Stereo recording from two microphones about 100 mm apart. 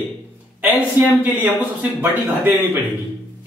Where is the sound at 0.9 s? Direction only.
20° right (ahead or behind).